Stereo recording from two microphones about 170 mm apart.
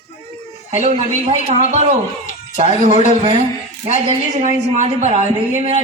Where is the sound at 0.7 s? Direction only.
40° right (ahead or behind).